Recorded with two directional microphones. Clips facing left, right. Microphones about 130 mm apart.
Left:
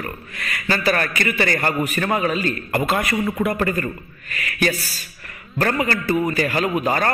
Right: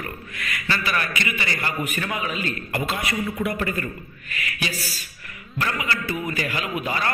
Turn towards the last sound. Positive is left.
turn(degrees=45)  # may be behind; listen again after turning